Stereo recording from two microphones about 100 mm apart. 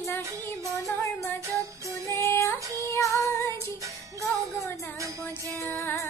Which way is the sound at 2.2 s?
25° left (ahead or behind).